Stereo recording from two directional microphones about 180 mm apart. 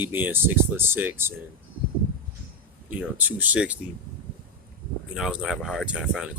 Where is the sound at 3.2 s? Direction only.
10° right (ahead or behind).